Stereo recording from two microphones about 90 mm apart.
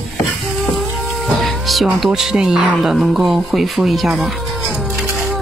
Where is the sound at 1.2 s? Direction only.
Centre (ahead or behind).